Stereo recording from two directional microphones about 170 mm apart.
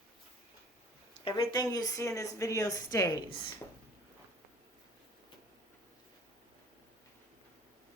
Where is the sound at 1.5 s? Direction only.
20° left (ahead or behind).